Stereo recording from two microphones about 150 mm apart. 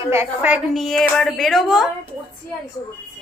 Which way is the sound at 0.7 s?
Centre (ahead or behind).